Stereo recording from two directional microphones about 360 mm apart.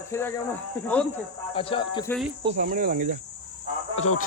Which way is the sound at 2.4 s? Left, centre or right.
Right.